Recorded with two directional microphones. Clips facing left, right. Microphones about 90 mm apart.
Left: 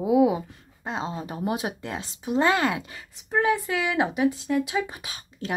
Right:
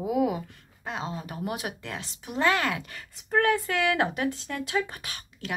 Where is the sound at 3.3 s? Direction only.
5° left (ahead or behind).